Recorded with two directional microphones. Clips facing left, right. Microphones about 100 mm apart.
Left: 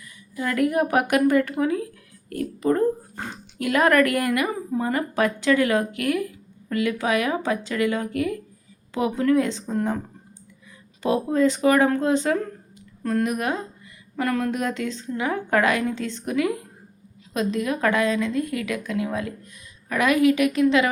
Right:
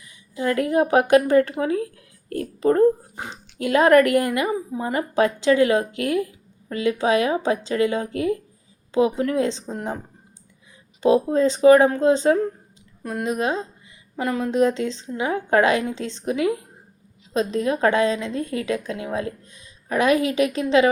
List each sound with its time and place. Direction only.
0.0 s speech: 25° right (ahead or behind)
3.2 s speech: 20° right (ahead or behind)
11.0 s speech: 25° right (ahead or behind)
13.0 s speech: 15° right (ahead or behind)